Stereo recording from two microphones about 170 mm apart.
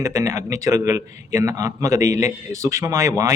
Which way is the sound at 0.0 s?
20° right (ahead or behind).